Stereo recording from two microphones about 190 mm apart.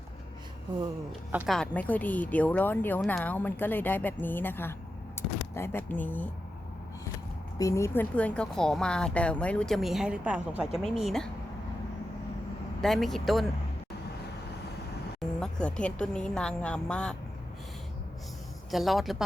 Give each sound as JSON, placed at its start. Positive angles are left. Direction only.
{"t": 1.3, "sound": "a woman's voice", "side_deg": -10}
{"t": 1.5, "sound": "a woman's voice", "side_deg": 5}
{"t": 7.6, "sound": "speech", "side_deg": 15}
{"t": 12.8, "sound": "speech", "side_deg": 0}
{"t": 15.4, "sound": "speech", "side_deg": 5}
{"t": 18.7, "sound": "speech", "side_deg": 0}